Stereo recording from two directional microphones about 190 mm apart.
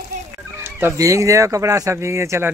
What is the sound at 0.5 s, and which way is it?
Speech, 10° right (ahead or behind).